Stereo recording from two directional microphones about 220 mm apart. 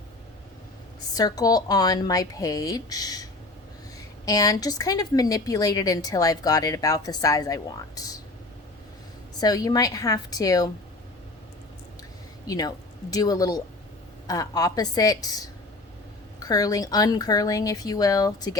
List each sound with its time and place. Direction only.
1.1 s a woman's voice: 15° left (ahead or behind)
4.3 s a woman's voice: 15° left (ahead or behind)
9.4 s a woman's voice: 15° left (ahead or behind)
12.5 s a woman's voice: 15° left (ahead or behind)